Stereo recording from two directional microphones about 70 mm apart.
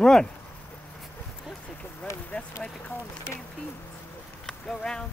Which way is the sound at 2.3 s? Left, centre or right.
Left.